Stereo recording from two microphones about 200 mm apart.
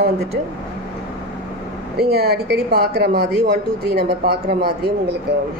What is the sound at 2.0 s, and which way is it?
A woman's voice, 50° right (ahead or behind).